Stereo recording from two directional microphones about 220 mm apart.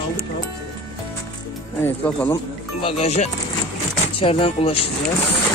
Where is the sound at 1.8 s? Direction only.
5° left (ahead or behind).